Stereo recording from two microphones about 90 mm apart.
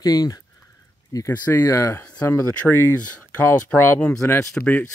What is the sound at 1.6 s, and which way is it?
Speech, 30° left (ahead or behind).